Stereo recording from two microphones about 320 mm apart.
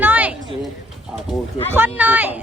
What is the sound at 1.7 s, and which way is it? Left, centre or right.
Speech, centre.